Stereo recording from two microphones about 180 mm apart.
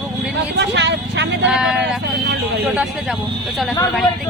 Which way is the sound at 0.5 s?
75° right (ahead or behind).